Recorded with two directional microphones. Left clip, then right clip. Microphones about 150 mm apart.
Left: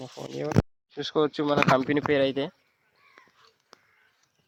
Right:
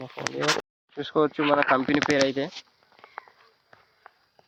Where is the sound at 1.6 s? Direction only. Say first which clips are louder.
Right 1 dB; 30° left (ahead or behind).